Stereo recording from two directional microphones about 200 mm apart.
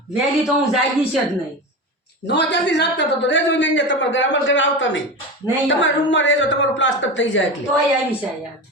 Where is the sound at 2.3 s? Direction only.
60° left (ahead or behind).